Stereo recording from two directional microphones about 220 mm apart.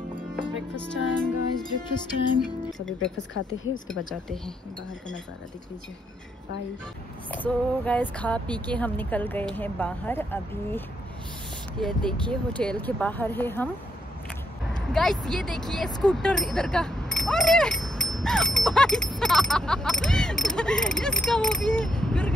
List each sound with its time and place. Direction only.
0.8 s music: 5° left (ahead or behind)
3.3 s speech: 60° left (ahead or behind)
7.2 s speech: 5° left (ahead or behind)
11.8 s speech: 5° left (ahead or behind)
14.8 s speech: centre (ahead or behind)